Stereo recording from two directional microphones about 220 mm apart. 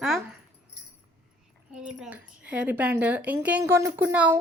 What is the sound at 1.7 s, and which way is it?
A woman's voice, 5° right (ahead or behind).